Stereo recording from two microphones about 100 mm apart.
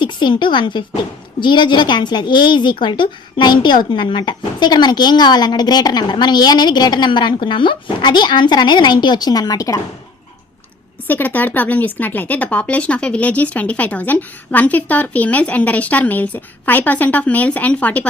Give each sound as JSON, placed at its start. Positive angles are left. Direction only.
{"t": 0.0, "sound": "a woman's voice", "side_deg": 50}
{"t": 11.1, "sound": "speech", "side_deg": 15}